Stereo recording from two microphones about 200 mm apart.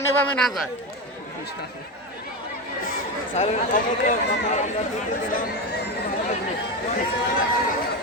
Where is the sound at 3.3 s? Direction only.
40° left (ahead or behind).